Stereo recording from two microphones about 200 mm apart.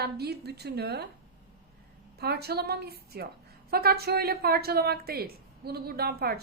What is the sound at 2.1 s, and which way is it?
A woman's voice, 55° right (ahead or behind).